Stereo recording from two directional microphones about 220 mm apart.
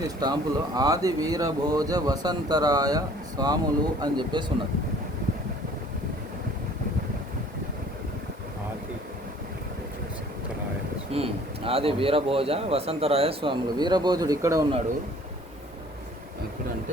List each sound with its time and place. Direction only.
0.2 s a man's voice: 20° right (ahead or behind)
11.1 s a man's voice: 25° right (ahead or behind)